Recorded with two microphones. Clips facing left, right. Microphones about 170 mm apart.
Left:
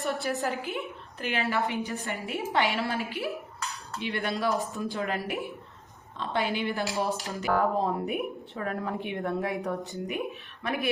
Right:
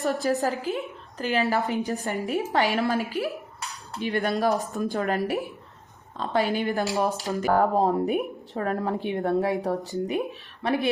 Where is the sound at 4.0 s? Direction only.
40° right (ahead or behind).